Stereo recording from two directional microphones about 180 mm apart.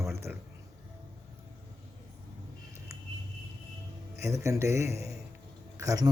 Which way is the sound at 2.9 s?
15° right (ahead or behind).